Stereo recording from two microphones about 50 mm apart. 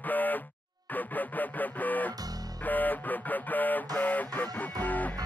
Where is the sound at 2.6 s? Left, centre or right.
Left.